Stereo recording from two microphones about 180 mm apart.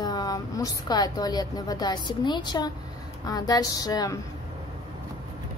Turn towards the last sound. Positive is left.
turn(degrees=20)  # may be behind; listen again after turning